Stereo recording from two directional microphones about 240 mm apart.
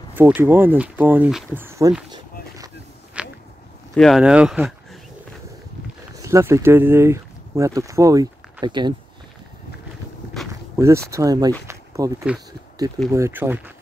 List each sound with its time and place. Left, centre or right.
0.1 s speech: centre
2.1 s a sound: centre
3.2 s a sound: centre
3.9 s speech: centre
6.1 s speech: centre
10.8 s speech: centre